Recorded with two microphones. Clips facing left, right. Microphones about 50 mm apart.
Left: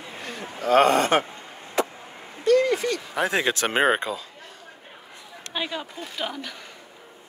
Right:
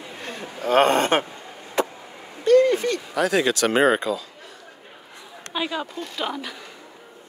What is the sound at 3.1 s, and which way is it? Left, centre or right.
Speech, left.